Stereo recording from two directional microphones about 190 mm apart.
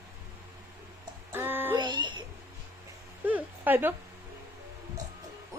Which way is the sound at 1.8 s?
25° right (ahead or behind).